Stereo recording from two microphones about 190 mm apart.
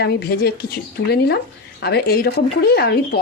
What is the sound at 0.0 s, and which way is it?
Speech, 55° left (ahead or behind).